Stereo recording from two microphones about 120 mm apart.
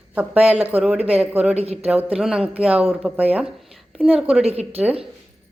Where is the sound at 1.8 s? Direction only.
10° right (ahead or behind).